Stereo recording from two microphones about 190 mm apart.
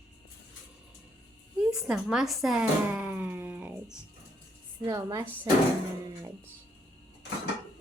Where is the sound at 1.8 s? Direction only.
5° right (ahead or behind).